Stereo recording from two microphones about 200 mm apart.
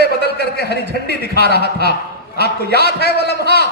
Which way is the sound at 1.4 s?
55° right (ahead or behind).